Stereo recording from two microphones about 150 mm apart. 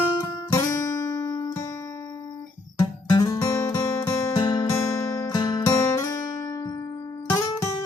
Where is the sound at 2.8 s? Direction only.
25° left (ahead or behind).